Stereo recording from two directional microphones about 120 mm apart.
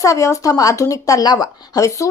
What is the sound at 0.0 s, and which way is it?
A woman's voice, 25° left (ahead or behind).